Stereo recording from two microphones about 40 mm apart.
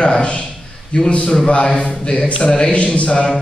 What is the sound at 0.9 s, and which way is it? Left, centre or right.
A man's voice, left.